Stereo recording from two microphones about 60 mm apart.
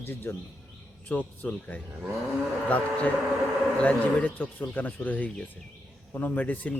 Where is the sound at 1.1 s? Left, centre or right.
Left.